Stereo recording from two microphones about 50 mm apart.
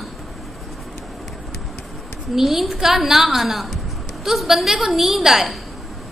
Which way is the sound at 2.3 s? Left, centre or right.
Centre.